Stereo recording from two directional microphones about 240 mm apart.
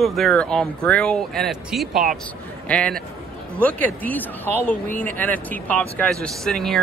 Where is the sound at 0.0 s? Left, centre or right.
Centre.